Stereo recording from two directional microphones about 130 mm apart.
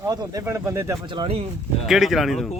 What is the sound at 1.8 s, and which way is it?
Speech, centre (ahead or behind).